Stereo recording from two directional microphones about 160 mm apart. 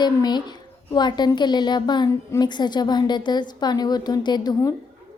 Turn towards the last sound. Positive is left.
turn(degrees=25)  # may be behind; listen again after turning